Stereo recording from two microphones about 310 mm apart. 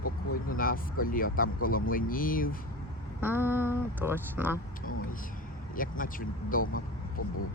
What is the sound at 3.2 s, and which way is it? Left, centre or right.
Speech, centre.